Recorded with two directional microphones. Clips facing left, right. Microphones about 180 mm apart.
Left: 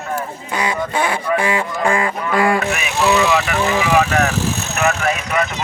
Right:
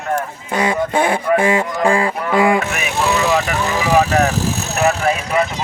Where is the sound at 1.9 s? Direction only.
30° right (ahead or behind).